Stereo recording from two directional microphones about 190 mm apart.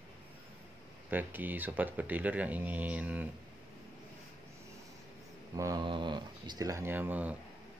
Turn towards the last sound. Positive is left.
turn(degrees=-10)  # may be behind; listen again after turning